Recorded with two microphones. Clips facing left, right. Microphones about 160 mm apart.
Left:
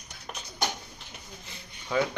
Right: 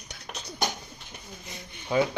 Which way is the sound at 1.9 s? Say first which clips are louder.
Right 3 dB; 30° right (ahead or behind).